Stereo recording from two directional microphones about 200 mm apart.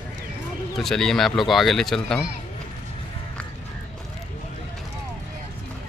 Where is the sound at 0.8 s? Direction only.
Centre (ahead or behind).